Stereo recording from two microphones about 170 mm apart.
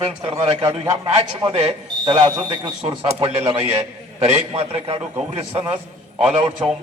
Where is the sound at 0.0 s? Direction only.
35° right (ahead or behind).